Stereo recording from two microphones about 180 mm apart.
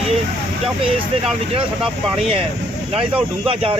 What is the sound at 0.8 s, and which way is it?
Speech, 30° right (ahead or behind).